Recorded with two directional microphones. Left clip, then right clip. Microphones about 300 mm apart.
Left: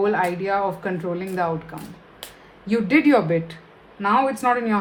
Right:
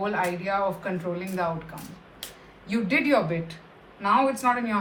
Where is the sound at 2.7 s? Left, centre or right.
Left.